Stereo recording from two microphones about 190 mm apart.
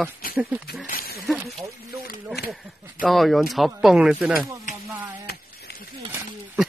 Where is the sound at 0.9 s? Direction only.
50° left (ahead or behind).